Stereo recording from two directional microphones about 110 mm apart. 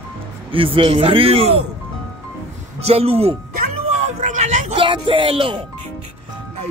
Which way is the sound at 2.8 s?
65° right (ahead or behind).